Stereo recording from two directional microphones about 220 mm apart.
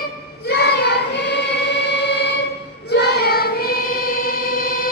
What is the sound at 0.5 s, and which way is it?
Choir, 50° left (ahead or behind).